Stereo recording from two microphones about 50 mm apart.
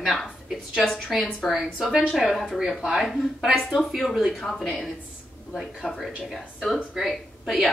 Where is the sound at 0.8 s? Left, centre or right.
Centre.